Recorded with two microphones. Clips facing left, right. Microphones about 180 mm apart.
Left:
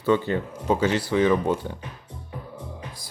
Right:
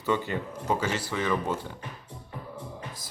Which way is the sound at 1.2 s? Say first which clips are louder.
Left 8 dB; 20° left (ahead or behind).